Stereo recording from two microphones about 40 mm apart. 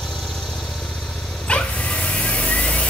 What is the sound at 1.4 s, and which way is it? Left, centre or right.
Dog, left.